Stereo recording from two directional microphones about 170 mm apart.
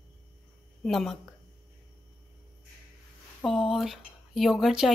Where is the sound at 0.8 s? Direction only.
Centre (ahead or behind).